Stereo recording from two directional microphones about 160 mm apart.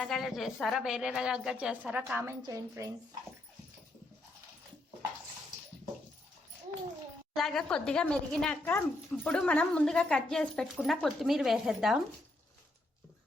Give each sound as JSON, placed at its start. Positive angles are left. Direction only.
{"t": 0.0, "sound": "a woman's voice", "side_deg": 0}
{"t": 7.3, "sound": "a woman's voice", "side_deg": 5}